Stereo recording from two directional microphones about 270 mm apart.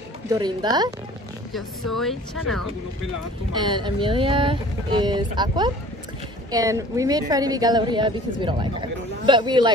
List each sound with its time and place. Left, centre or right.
0.3 s speech: centre
1.5 s speech: centre
3.5 s speech: centre